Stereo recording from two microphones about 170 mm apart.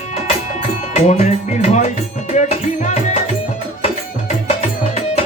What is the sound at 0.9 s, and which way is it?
Music, 45° left (ahead or behind).